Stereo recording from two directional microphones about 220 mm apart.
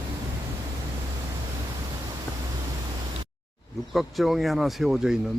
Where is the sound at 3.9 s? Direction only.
Centre (ahead or behind).